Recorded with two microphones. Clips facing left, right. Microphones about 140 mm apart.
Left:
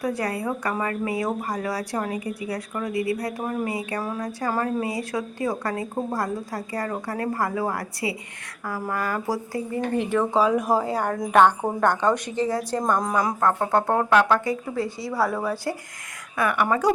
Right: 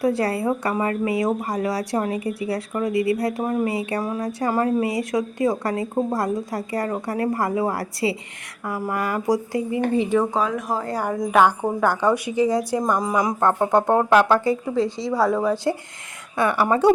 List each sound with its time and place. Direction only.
0.0 s speech: 30° right (ahead or behind)
10.3 s speech: 5° left (ahead or behind); by 13.3 s 10° right (ahead or behind)
13.4 s speech: 20° right (ahead or behind)
14.1 s speech: 30° right (ahead or behind)
15.3 s speech: 15° right (ahead or behind)
16.4 s speech: 30° right (ahead or behind)